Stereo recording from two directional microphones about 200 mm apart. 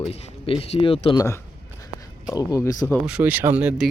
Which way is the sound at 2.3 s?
15° left (ahead or behind).